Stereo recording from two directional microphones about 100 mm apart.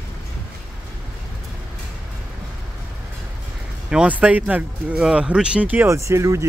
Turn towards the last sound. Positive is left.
turn(degrees=-30)  # may be behind; listen again after turning